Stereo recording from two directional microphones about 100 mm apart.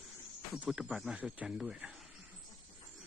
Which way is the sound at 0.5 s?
5° right (ahead or behind).